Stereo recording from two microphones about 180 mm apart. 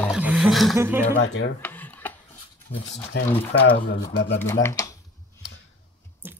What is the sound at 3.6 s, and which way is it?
Speech, 90° left.